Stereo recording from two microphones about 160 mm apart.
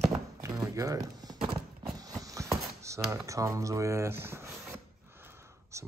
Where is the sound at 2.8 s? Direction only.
20° right (ahead or behind).